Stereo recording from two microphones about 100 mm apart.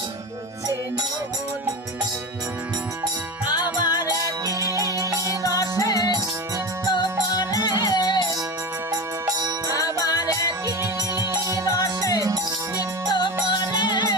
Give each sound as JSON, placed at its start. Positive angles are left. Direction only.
{"t": 3.5, "sound": "music", "side_deg": 45}
{"t": 4.1, "sound": "music", "side_deg": -35}
{"t": 5.3, "sound": "music", "side_deg": 35}
{"t": 8.9, "sound": "music", "side_deg": -40}
{"t": 9.7, "sound": "music", "side_deg": 35}
{"t": 13.1, "sound": "music", "side_deg": 50}